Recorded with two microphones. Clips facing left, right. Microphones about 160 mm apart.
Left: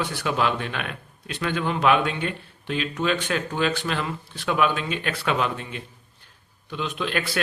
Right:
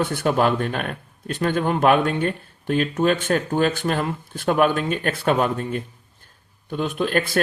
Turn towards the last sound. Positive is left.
turn(degrees=-45)  # may be behind; listen again after turning